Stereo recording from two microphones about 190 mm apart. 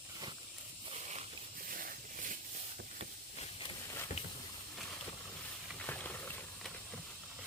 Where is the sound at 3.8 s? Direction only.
15° left (ahead or behind).